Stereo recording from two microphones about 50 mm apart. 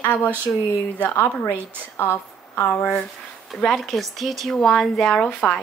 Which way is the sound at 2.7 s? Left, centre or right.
Left.